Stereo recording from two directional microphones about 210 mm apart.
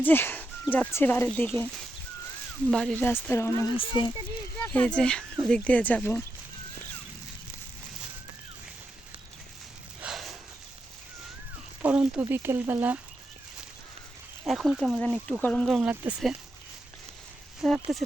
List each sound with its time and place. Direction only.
0.0 s speech: 10° left (ahead or behind)
4.6 s speech: 5° left (ahead or behind)
10.0 s a sound: centre (ahead or behind)
11.8 s a sound: 5° right (ahead or behind)
12.2 s speech: 10° right (ahead or behind)
14.4 s speech: centre (ahead or behind)
17.6 s speech: centre (ahead or behind)